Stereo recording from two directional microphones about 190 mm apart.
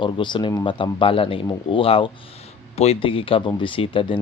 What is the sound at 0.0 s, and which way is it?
Speech, 25° left (ahead or behind).